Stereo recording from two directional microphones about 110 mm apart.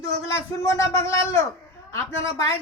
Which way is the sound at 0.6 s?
30° left (ahead or behind).